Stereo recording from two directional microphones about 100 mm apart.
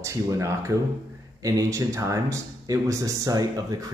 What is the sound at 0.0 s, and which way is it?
Speech, 30° right (ahead or behind).